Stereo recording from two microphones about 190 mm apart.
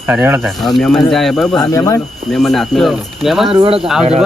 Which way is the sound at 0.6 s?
Centre (ahead or behind).